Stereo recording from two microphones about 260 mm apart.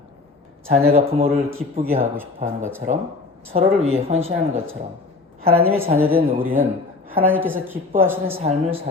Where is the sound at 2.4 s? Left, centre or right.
Right.